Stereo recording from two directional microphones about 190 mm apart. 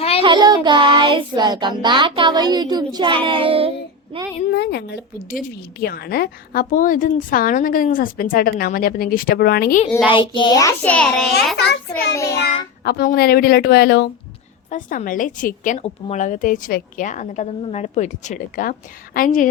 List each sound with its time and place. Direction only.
0.2 s child singing: 25° right (ahead or behind)
4.5 s a woman's voice: 60° left (ahead or behind)
10.1 s child singing: 25° left (ahead or behind); by 11.3 s 5° left (ahead or behind)
11.5 s a woman's voice: 60° left (ahead or behind)
12.1 s child singing: 15° left (ahead or behind)
12.8 s a woman's voice: 55° left (ahead or behind)
14.7 s a woman's voice: 45° left (ahead or behind)